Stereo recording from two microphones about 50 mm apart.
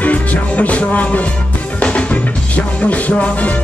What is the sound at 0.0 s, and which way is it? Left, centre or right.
Music, left.